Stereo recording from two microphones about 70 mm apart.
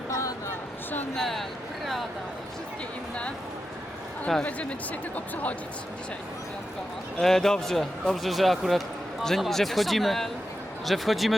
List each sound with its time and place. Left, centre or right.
0.1 s a sound: left
1.1 s speech: centre
5.1 s speech: left
7.2 s speech: centre